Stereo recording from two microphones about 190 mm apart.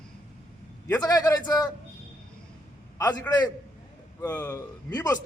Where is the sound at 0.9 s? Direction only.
20° left (ahead or behind).